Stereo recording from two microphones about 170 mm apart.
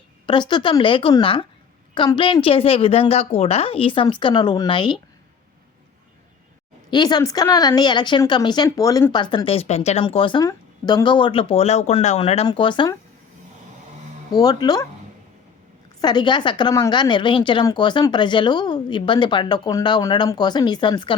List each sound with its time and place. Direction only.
0.3 s a woman's voice: 25° left (ahead or behind)
6.9 s a woman's voice: 25° left (ahead or behind)
14.3 s a woman's voice: 25° left (ahead or behind)
16.0 s a woman's voice: 25° left (ahead or behind)